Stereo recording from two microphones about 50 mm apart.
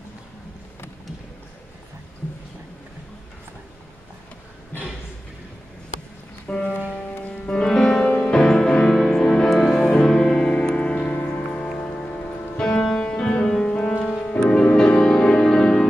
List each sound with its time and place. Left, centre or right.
6.4 s music: centre
10.5 s music: centre
12.8 s music: centre